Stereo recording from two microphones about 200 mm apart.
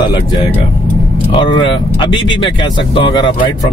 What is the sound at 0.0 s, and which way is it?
Speech, 25° left (ahead or behind).